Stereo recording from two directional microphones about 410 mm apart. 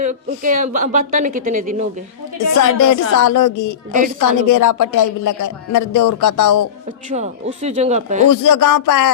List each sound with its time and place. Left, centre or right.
0.0 s speech: centre
2.6 s speech: left
7.1 s speech: centre
8.3 s speech: left